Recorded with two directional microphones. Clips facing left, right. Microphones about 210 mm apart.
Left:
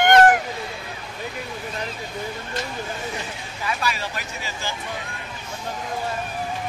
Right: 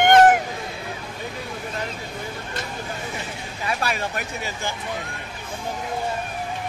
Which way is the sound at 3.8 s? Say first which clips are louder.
Right 2 dB; 55° right (ahead or behind).